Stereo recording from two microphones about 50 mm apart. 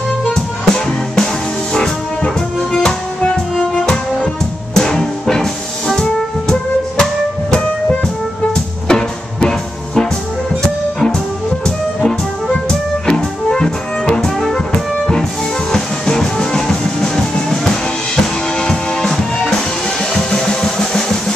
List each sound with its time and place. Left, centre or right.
0.3 s music: centre
8.5 s music: centre
15.7 s music: centre